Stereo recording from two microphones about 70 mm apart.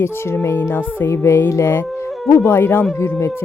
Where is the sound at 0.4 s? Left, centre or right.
Left.